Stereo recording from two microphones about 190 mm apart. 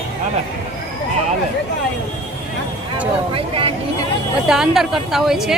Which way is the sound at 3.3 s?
30° right (ahead or behind).